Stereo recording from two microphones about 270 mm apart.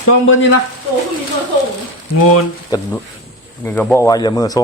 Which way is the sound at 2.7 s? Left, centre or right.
Centre.